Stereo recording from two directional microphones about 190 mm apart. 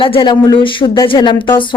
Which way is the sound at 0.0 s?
25° left (ahead or behind).